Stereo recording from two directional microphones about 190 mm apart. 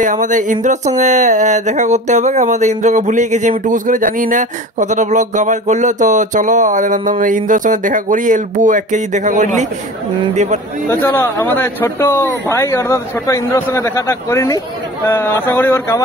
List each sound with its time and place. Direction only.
0.0 s speech: 40° right (ahead or behind)
10.9 s a man's voice: 10° left (ahead or behind)